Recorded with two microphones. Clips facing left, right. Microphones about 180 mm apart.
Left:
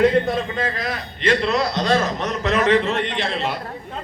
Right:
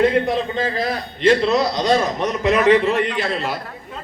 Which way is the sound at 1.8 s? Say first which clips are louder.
Right 2 dB; 15° right (ahead or behind).